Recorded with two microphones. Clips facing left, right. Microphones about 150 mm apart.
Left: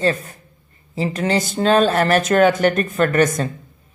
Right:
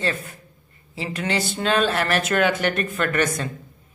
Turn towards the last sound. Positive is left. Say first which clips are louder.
# left 6 dB
turn(degrees=40)  # may be behind; listen again after turning